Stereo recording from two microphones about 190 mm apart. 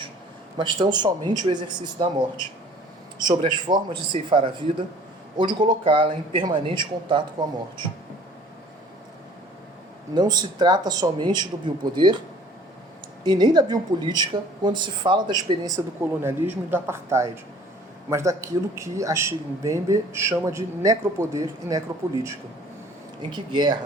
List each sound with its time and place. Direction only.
0.5 s a woman's voice: 25° right (ahead or behind)
3.2 s a woman's voice: 25° right (ahead or behind)
10.2 s a woman's voice: 20° right (ahead or behind)
13.2 s a woman's voice: 20° right (ahead or behind)